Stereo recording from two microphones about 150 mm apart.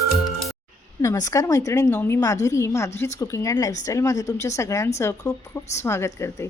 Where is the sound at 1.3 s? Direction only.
20° left (ahead or behind).